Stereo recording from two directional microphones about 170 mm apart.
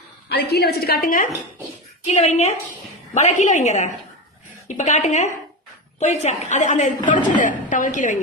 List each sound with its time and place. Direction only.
0.3 s a woman's voice: 70° left (ahead or behind); by 1.3 s 55° left (ahead or behind)
2.0 s a woman's voice: 40° left (ahead or behind)